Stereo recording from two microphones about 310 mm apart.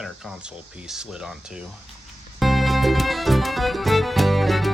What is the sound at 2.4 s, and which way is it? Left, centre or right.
Music, centre.